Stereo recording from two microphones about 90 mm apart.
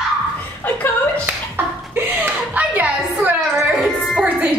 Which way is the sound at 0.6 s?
20° left (ahead or behind).